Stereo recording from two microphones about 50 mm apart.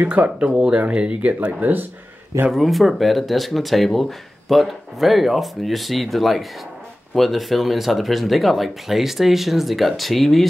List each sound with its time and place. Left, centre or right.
0.0 s speech: right
0.5 s speech: centre
2.5 s speech: centre